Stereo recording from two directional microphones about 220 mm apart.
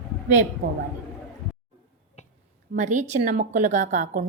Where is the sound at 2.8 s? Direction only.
35° right (ahead or behind).